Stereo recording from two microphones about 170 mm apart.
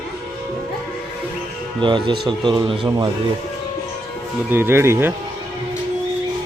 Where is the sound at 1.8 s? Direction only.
30° right (ahead or behind).